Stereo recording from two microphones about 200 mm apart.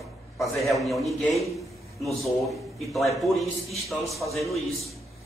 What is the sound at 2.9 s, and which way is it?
A man's voice, centre (ahead or behind).